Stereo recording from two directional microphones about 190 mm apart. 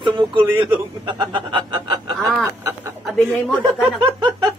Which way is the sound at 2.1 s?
Centre (ahead or behind).